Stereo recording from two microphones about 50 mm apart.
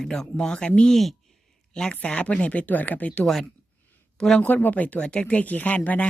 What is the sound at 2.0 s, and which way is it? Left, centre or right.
Speech, left.